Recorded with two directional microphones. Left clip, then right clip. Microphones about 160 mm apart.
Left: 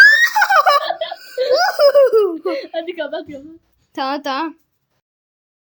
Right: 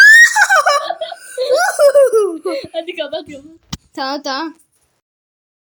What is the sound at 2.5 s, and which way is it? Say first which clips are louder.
Speech: right 1 dB; 40° left (ahead or behind).